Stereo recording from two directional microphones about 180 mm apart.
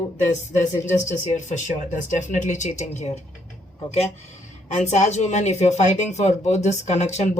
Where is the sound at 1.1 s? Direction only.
45° left (ahead or behind).